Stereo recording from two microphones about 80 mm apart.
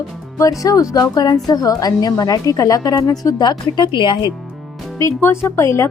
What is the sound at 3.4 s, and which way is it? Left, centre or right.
Speech, left.